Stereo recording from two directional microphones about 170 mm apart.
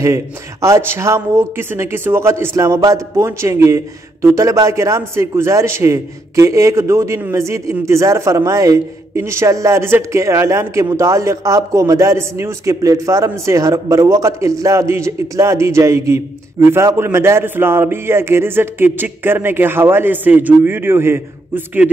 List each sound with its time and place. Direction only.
0.0 s speech: 20° right (ahead or behind)